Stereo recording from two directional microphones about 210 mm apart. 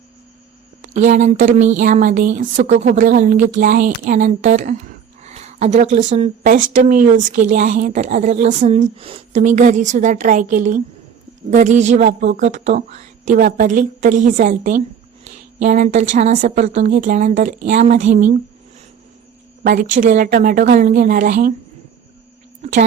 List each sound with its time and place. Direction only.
0.8 s a woman's voice: 35° right (ahead or behind)
19.6 s a woman's voice: 40° right (ahead or behind)
22.6 s a sound: 30° right (ahead or behind)